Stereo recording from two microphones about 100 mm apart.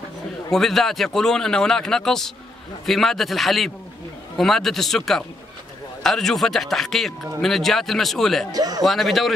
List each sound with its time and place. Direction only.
0.5 s speech: 5° left (ahead or behind)
8.5 s a man's voice: 40° right (ahead or behind)
8.8 s speech: centre (ahead or behind)